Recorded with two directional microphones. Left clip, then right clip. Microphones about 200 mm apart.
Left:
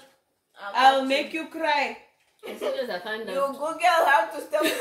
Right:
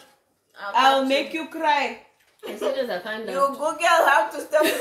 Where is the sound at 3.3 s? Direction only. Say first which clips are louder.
Right 5 dB; 10° right (ahead or behind).